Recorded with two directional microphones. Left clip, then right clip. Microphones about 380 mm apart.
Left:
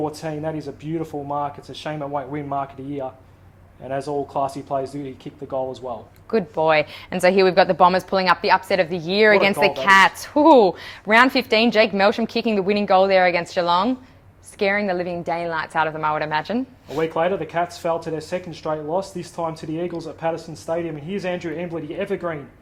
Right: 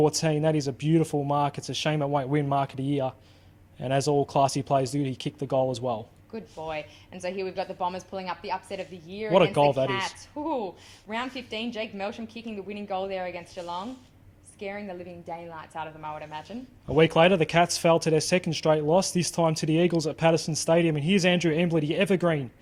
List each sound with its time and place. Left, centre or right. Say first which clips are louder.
0.0 s speech: right 2 dB; right
6.3 s a woman's voice: left 17 dB; left
16.9 s speech: right 1 dB; right